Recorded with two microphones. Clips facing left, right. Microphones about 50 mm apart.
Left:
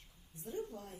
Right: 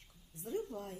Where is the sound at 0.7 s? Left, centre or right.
Right.